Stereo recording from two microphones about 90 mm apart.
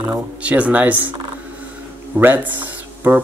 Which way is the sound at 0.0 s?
15° right (ahead or behind).